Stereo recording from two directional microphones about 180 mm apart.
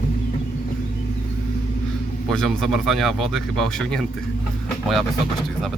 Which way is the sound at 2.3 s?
Centre (ahead or behind).